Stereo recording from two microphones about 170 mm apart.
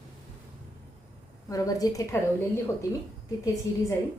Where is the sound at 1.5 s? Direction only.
20° left (ahead or behind).